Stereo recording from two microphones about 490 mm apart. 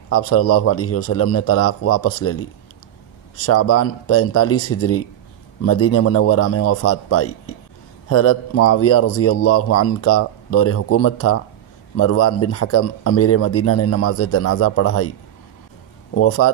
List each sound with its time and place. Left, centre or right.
0.1 s a man's voice: left
3.4 s a man's voice: left
16.2 s a man's voice: left